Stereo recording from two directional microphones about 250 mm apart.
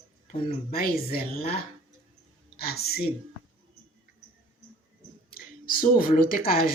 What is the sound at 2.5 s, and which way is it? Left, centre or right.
Speech, left.